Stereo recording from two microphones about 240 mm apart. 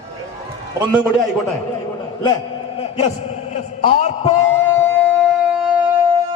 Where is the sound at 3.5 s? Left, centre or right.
Left.